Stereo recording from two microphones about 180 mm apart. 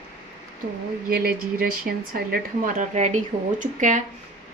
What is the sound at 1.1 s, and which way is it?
Speech, 55° right (ahead or behind).